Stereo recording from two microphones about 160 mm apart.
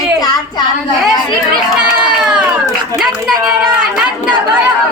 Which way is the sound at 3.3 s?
25° right (ahead or behind).